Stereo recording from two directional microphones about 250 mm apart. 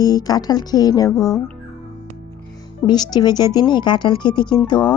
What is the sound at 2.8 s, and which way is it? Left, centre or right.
Speech, centre.